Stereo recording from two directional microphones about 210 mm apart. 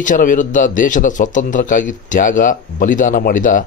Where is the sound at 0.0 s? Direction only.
40° left (ahead or behind).